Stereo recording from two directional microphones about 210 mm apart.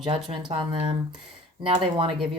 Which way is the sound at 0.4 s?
25° right (ahead or behind).